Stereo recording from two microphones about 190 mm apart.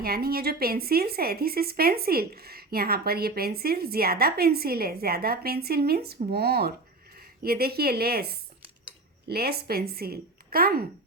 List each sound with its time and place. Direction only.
0.0 s a woman's voice: 55° right (ahead or behind)